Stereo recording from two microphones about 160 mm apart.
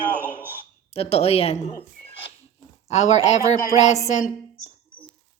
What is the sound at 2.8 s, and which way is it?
A woman's voice, 45° left (ahead or behind).